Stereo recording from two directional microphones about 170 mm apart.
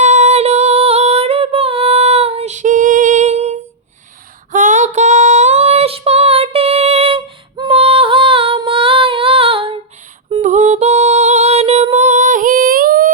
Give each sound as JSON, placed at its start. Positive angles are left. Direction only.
{"t": 0.0, "sound": "female singing", "side_deg": -45}
{"t": 10.4, "sound": "music", "side_deg": -45}